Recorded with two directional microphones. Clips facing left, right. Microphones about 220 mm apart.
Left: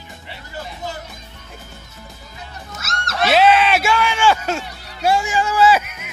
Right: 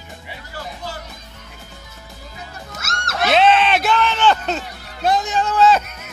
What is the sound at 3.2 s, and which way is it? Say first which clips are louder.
Music: left 1 dB; 5° left (ahead or behind).